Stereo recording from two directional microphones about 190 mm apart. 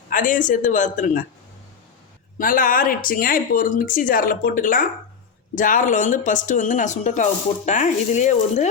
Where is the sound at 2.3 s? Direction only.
45° left (ahead or behind).